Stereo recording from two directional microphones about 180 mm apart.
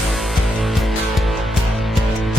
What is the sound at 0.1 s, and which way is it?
Music, centre (ahead or behind).